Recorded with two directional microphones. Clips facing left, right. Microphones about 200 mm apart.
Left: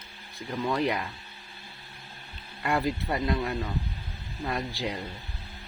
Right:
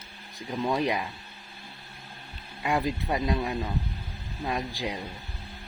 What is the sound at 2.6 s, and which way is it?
Speech, 15° right (ahead or behind).